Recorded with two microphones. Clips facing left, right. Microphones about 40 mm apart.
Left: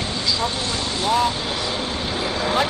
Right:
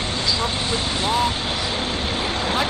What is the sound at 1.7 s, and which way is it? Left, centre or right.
Vehicle, right.